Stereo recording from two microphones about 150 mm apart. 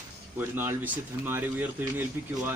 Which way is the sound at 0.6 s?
15° right (ahead or behind).